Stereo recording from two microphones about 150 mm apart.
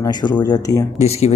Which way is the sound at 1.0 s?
45° left (ahead or behind).